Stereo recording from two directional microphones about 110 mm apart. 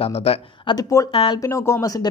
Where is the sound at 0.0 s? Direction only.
65° left (ahead or behind).